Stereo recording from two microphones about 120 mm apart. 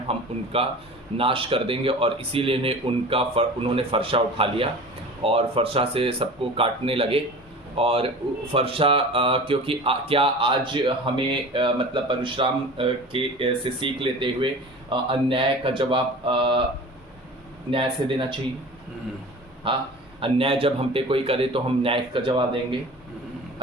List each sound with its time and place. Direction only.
0.1 s speech: 50° right (ahead or behind)
17.7 s speech: 45° right (ahead or behind)
19.6 s speech: 45° right (ahead or behind)